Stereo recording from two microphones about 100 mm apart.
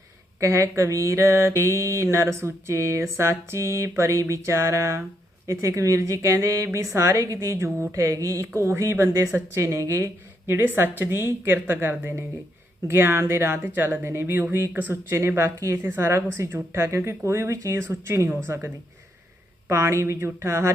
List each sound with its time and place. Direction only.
0.3 s a woman's voice: 30° right (ahead or behind)